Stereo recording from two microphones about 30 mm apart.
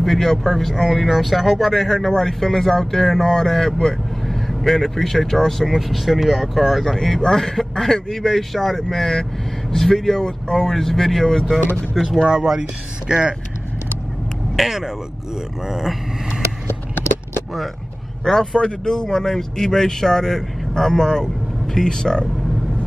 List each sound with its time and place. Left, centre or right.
0.0 s speech: centre
1.7 s speech: centre
11.9 s speech: centre
12.2 s speech: right
14.6 s speech: centre
18.2 s speech: centre